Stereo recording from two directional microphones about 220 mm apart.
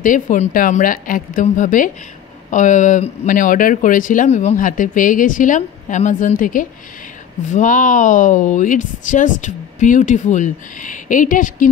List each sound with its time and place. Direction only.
0.0 s speech: 35° left (ahead or behind)